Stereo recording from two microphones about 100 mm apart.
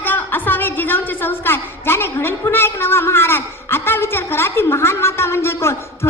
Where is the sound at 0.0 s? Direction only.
20° left (ahead or behind).